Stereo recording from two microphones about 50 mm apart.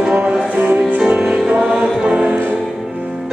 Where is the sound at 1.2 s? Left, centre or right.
Centre.